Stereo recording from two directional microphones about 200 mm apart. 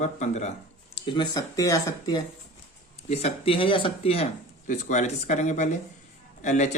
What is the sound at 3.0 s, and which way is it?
Speech, 30° left (ahead or behind).